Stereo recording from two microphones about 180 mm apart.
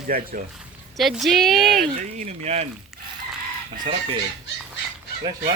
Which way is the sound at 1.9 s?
40° right (ahead or behind).